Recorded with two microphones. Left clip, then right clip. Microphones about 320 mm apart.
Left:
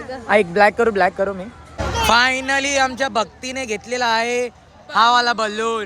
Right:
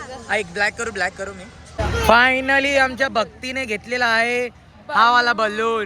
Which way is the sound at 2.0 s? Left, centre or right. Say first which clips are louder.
Right 1 dB; centre.